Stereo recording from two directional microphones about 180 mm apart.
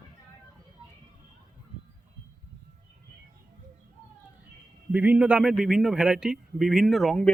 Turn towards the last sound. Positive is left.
turn(degrees=0)  # may be behind; listen again after turning